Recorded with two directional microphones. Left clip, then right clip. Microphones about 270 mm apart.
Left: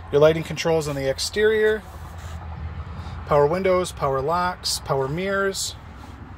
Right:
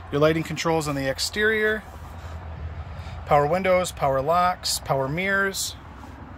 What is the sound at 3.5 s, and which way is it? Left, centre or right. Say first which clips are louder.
Speech: even; centre.